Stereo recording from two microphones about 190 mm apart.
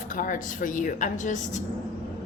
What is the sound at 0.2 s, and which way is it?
Speech, 45° left (ahead or behind).